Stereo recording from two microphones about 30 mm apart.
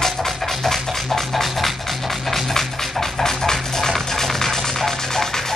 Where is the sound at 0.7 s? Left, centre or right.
Centre.